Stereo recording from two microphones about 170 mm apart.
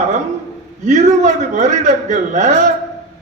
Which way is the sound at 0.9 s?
45° right (ahead or behind).